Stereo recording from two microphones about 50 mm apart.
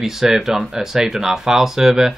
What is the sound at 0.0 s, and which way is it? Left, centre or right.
Speech, centre.